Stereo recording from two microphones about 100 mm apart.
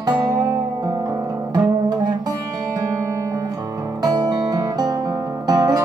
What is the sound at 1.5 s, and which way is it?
Music, 45° right (ahead or behind).